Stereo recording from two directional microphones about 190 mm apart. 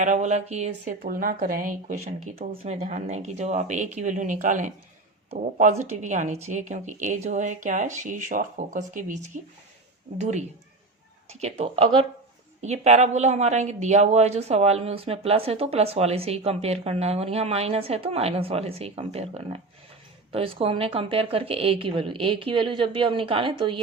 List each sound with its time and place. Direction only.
0.0 s a woman's voice: 40° right (ahead or behind)
0.9 s a woman's voice: 45° right (ahead or behind); by 23.8 s 25° right (ahead or behind)